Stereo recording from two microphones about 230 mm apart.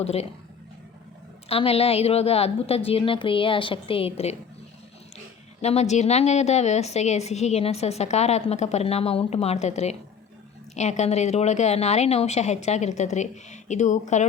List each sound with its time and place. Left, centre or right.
0.0 s a woman's voice: left
1.5 s a woman's voice: left
5.6 s a woman's voice: left